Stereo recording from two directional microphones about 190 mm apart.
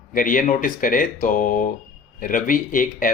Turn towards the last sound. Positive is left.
turn(degrees=45)  # may be behind; listen again after turning